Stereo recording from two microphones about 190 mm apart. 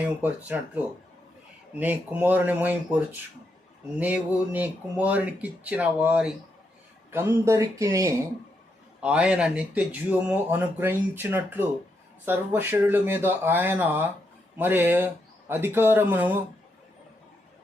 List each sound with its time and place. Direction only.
0.0 s speech: 10° right (ahead or behind)
1.7 s speech: 10° right (ahead or behind)
9.0 s speech: 5° right (ahead or behind)